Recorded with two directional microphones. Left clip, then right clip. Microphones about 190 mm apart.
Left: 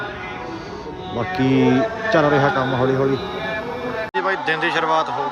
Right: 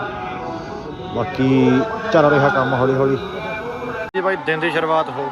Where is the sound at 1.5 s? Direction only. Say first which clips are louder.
Right 1 dB; 50° left (ahead or behind).